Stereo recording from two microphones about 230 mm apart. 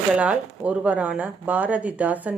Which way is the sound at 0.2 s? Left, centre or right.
Centre.